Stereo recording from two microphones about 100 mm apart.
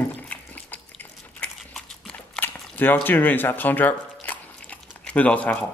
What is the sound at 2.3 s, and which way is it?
Squish, 20° left (ahead or behind).